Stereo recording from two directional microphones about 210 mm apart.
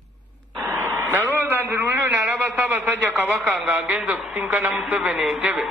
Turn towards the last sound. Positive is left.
turn(degrees=-5)  # may be behind; listen again after turning